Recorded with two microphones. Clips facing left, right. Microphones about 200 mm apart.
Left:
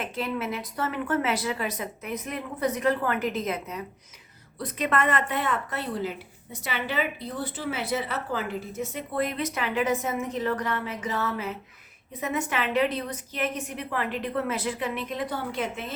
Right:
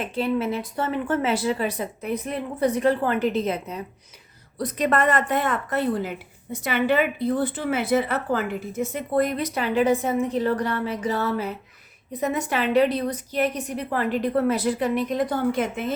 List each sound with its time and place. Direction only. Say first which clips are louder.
0.0 s a woman's voice: right 6 dB; 30° right (ahead or behind); by 16.0 s 50° right (ahead or behind)